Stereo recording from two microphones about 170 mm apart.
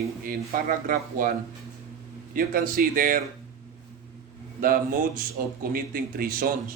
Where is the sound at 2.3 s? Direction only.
60° right (ahead or behind).